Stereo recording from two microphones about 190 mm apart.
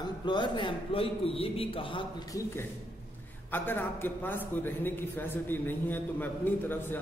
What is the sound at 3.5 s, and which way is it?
A man's voice, 10° left (ahead or behind).